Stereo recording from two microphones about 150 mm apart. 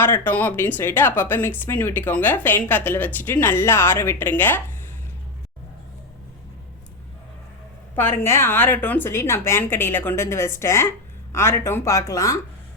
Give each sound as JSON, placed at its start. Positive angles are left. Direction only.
{"t": 0.0, "sound": "speech", "side_deg": 15}
{"t": 7.9, "sound": "speech", "side_deg": 15}